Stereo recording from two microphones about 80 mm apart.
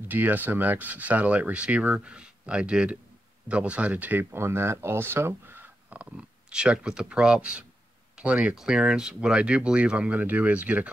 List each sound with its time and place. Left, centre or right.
0.1 s speech: right